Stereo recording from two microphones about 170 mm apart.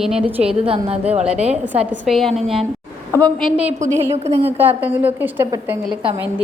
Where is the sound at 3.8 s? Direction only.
45° right (ahead or behind).